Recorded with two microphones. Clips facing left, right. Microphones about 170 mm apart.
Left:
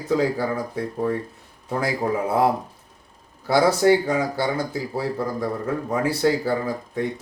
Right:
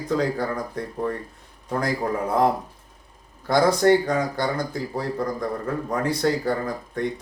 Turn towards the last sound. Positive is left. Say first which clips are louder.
# left 1 dB
turn(degrees=5)  # may be behind; listen again after turning